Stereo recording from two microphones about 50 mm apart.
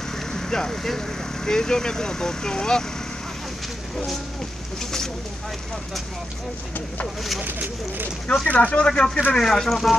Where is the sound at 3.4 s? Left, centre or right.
Centre.